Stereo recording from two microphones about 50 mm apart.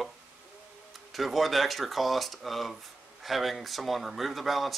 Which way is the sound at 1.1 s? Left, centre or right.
Centre.